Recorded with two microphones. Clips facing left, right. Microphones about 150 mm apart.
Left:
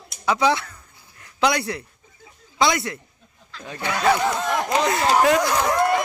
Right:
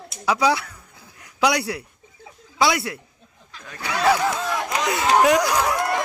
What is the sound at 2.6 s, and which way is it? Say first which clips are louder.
Speech: even; 10° right (ahead or behind).